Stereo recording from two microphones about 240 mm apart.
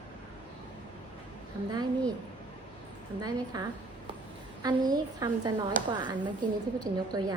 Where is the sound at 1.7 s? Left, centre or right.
Centre.